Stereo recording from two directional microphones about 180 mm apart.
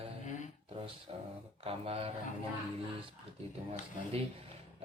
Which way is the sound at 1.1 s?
30° right (ahead or behind).